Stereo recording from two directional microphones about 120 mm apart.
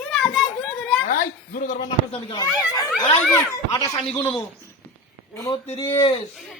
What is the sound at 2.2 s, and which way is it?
Speech, 35° left (ahead or behind).